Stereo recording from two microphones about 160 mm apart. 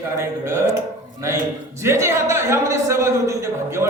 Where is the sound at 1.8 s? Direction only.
15° right (ahead or behind).